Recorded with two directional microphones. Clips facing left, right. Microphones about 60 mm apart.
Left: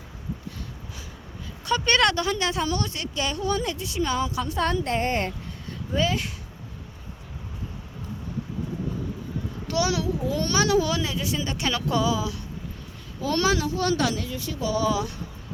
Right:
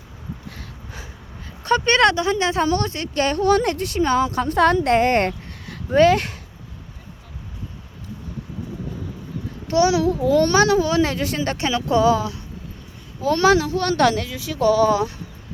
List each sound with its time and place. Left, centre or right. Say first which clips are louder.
1.6 s a child's voice: right 5 dB; right
2.6 s a child's voice: right 6 dB; right
3.2 s speech: right 8 dB; right
3.4 s speech: right 9 dB; right
4.0 s a child's voice: right 7 dB; right
4.5 s speech: right 10 dB; right
9.6 s a child's voice: right 8 dB; right
10.3 s a child's voice: right 6 dB; right
11.0 s speech: right 6 dB; right
14.9 s a child's voice: right 6 dB; right